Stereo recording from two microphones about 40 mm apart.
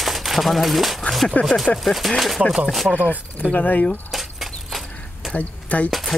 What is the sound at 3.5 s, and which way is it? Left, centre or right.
Speech, left.